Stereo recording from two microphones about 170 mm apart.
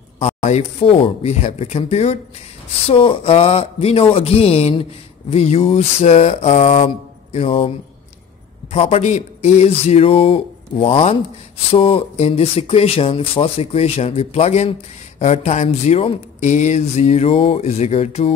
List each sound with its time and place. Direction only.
0.2 s speech: 40° left (ahead or behind)
8.7 s speech: 40° left (ahead or behind)